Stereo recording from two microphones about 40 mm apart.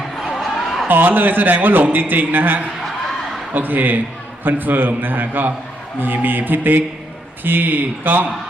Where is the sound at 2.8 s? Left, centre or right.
Centre.